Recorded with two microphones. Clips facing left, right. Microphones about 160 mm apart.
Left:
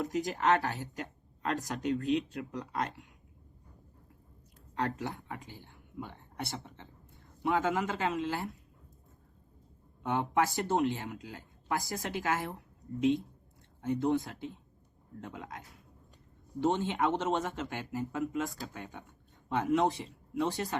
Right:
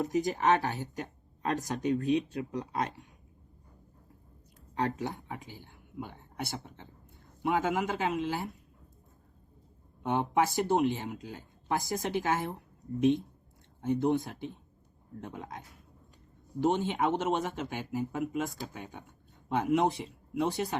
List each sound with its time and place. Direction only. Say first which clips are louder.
0.0 s speech: right 3 dB; 20° right (ahead or behind)
4.8 s speech: right 2 dB; 20° right (ahead or behind)
5.6 s speech: right 2 dB; 10° right (ahead or behind)
7.4 s speech: right 1 dB; 20° right (ahead or behind)
10.0 s speech: right 2 dB; 20° right (ahead or behind)
13.8 s speech: right 2 dB; 15° right (ahead or behind)
15.2 s speech: right 2 dB; 20° right (ahead or behind)